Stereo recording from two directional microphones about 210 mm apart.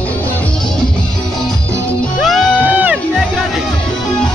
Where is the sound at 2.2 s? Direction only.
5° right (ahead or behind).